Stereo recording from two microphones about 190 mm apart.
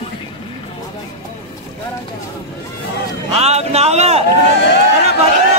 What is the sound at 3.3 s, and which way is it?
Speech, 35° right (ahead or behind).